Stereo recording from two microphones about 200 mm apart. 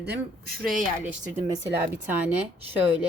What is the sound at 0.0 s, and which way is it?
Speech, 55° right (ahead or behind).